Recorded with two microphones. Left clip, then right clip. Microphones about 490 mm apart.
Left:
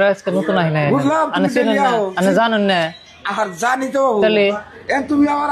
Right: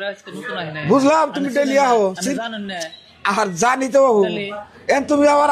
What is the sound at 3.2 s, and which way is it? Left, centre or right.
A man's voice, right.